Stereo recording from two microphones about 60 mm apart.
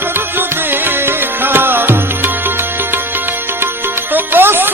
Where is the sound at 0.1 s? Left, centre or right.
Right.